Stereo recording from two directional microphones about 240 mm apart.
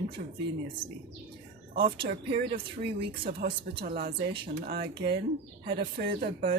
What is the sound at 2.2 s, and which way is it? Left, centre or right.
Speech, right.